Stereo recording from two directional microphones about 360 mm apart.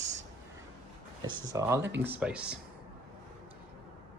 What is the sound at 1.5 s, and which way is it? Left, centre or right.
Speech, centre.